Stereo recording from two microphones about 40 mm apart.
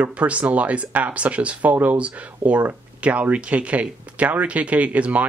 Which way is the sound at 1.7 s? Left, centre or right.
Right.